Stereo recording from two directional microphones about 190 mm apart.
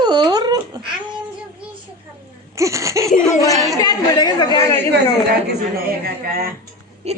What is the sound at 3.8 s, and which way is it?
Chatter, 20° left (ahead or behind).